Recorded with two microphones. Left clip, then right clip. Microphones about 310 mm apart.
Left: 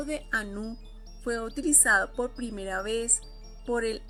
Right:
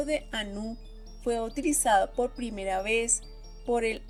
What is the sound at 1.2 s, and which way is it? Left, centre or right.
Speech, right.